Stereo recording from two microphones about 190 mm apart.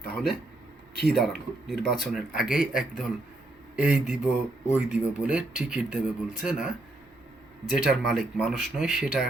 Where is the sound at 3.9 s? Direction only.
40° left (ahead or behind).